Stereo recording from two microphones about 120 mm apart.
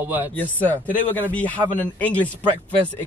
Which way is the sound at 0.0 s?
15° right (ahead or behind).